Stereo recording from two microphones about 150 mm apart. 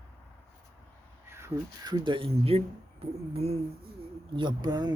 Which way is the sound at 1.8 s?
30° right (ahead or behind).